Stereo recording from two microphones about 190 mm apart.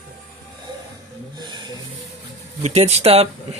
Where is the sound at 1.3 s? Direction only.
25° right (ahead or behind).